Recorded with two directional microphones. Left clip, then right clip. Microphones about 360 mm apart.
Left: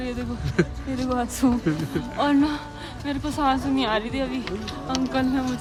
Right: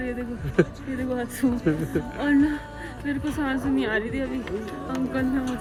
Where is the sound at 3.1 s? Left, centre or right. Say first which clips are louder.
Left 4 dB; centre.